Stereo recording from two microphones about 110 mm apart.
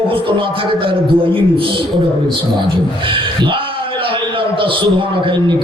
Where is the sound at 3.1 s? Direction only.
50° right (ahead or behind).